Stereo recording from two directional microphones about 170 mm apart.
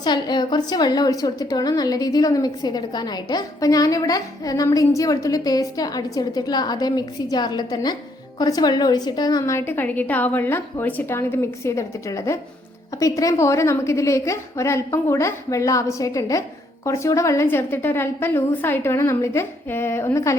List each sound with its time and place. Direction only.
0.0 s a woman's voice: 25° left (ahead or behind)